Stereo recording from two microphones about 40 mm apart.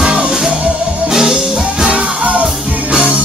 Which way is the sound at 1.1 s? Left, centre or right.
Centre.